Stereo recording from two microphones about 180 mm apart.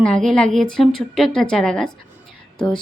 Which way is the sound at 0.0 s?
5° left (ahead or behind).